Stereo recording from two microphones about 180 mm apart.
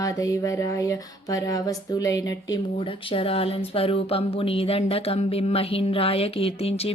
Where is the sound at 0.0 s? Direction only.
20° left (ahead or behind).